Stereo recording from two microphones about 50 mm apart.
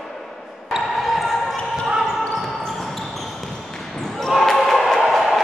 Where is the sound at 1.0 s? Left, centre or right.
Centre.